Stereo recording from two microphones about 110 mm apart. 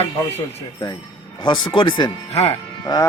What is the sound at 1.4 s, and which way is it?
Speech, 40° left (ahead or behind).